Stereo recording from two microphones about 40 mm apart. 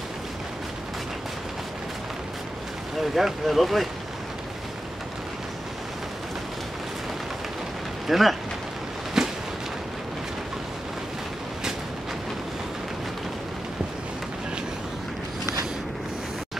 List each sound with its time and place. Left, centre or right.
3.0 s speech: centre
8.1 s speech: centre
9.2 s a sound: centre